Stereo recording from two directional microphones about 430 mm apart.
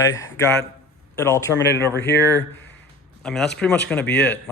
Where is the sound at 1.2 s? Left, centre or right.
Centre.